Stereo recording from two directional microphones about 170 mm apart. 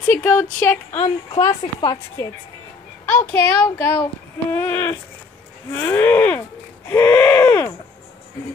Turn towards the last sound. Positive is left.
turn(degrees=15)  # may be behind; listen again after turning